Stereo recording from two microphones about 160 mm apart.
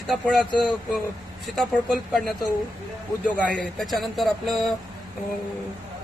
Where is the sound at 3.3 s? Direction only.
5° left (ahead or behind).